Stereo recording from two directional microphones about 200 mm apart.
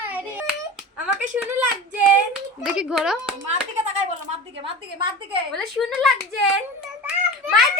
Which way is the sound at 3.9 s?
35° right (ahead or behind).